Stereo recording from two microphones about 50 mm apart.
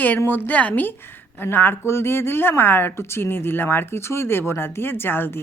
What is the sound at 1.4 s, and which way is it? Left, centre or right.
A woman's voice, left.